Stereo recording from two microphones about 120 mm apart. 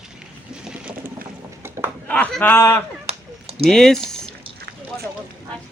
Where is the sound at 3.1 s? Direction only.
55° right (ahead or behind).